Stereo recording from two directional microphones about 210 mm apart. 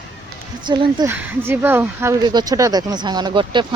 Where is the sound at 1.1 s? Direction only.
10° right (ahead or behind).